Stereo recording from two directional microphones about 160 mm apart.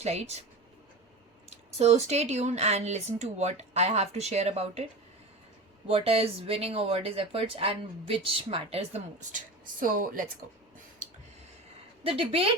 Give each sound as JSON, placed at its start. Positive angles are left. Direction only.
{"t": 0.0, "sound": "speech", "side_deg": -40}
{"t": 1.5, "sound": "speech", "side_deg": -40}
{"t": 5.9, "sound": "speech", "side_deg": -35}
{"t": 9.8, "sound": "a woman's voice", "side_deg": -60}
{"t": 12.0, "sound": "speech", "side_deg": -35}